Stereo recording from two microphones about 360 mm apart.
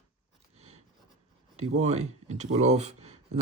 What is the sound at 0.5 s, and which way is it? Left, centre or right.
Writing, centre.